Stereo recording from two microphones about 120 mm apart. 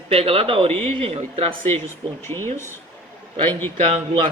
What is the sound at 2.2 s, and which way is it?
Speech, 20° left (ahead or behind).